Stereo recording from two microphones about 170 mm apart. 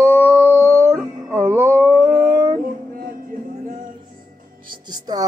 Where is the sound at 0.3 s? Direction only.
15° right (ahead or behind).